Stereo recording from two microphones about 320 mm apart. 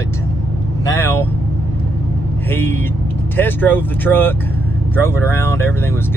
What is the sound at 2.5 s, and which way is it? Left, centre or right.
Speech, centre.